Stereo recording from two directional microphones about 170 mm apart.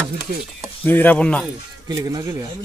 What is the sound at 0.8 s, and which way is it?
Speech, 10° left (ahead or behind).